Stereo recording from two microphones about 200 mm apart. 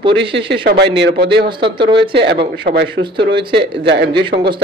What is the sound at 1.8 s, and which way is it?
Speech, 25° right (ahead or behind).